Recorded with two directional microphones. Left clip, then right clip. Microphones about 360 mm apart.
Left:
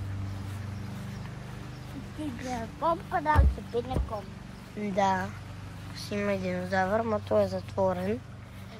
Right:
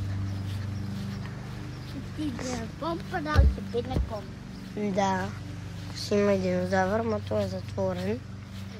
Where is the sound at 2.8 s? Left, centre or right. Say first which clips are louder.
Left 5 dB; centre.